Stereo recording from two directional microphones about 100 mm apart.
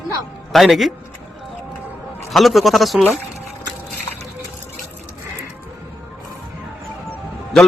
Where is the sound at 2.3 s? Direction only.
Centre (ahead or behind).